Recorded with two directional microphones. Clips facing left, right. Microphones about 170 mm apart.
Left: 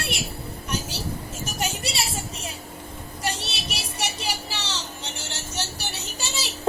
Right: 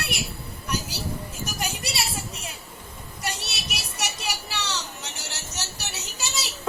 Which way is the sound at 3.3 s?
30° left (ahead or behind).